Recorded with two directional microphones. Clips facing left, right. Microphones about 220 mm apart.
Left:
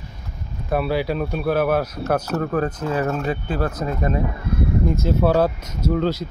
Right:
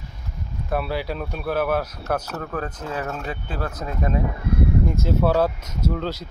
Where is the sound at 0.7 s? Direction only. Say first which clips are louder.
Left 5 dB; 5° left (ahead or behind).